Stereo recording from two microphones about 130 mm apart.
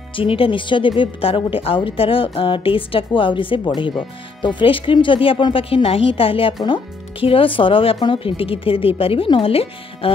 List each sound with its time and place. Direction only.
0.1 s speech: 45° left (ahead or behind)